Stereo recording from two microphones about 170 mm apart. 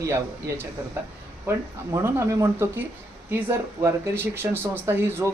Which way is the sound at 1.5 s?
15° right (ahead or behind).